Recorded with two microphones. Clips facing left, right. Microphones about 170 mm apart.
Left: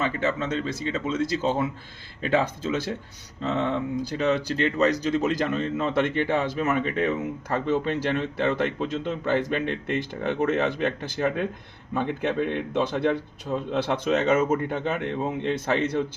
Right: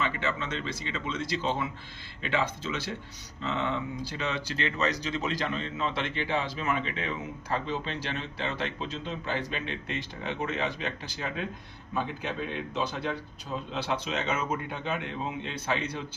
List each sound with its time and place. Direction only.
0.0 s speech: 40° left (ahead or behind)